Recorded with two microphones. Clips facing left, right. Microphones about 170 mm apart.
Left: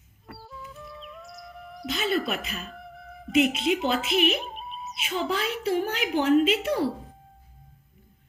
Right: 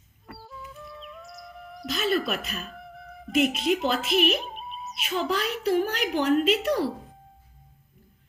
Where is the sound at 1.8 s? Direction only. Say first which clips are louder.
Right 1 dB; 25° left (ahead or behind).